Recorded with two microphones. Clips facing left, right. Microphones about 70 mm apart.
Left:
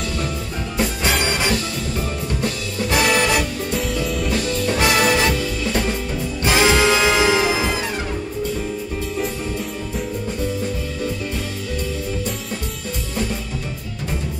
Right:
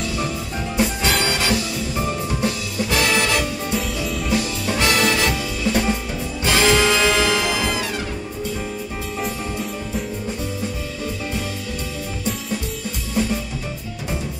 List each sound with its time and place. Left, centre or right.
1.2 s music: left
2.9 s music: centre
3.7 s music: centre
4.7 s music: centre
5.7 s music: centre
6.4 s music: centre